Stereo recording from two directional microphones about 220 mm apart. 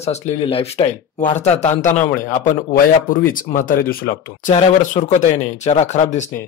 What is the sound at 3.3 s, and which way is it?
Speech, 40° left (ahead or behind).